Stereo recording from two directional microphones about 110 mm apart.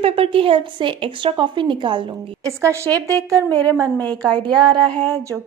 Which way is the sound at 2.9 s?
30° right (ahead or behind).